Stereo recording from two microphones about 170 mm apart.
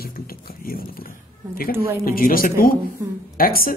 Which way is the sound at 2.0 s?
60° left (ahead or behind).